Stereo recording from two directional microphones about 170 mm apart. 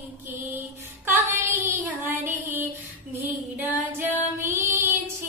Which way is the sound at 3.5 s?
10° right (ahead or behind).